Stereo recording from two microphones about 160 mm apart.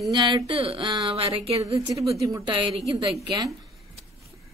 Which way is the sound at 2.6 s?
30° right (ahead or behind).